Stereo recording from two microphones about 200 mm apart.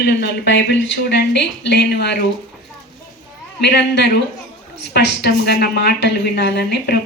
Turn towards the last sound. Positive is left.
turn(degrees=55)  # may be behind; listen again after turning